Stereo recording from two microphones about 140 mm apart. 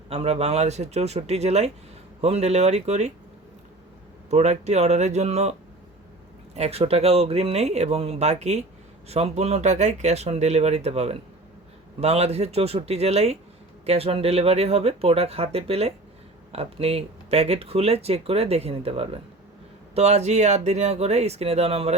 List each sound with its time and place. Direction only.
0.1 s speech: 45° right (ahead or behind)
4.3 s speech: 50° right (ahead or behind)